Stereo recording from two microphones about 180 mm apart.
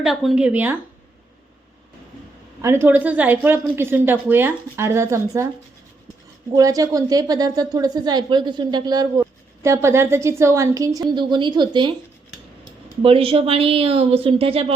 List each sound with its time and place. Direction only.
0.0 s speech: centre (ahead or behind)
2.6 s speech: 15° right (ahead or behind)
6.5 s a woman's voice: 20° right (ahead or behind)
13.0 s a woman's voice: 30° right (ahead or behind)